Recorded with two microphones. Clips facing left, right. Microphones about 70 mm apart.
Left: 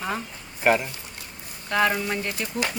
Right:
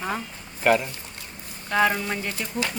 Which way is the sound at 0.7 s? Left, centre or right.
Centre.